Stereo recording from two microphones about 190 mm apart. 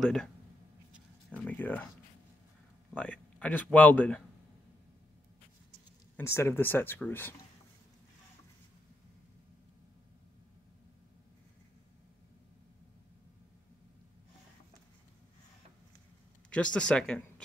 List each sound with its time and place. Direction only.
0.0 s speech: 5° left (ahead or behind)
1.3 s speech: 10° left (ahead or behind)
2.9 s speech: 5° left (ahead or behind)
6.1 s speech: 15° left (ahead or behind)
16.4 s speech: 5° left (ahead or behind)